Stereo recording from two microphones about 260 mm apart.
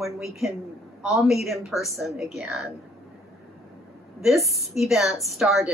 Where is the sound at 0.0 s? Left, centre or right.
Centre.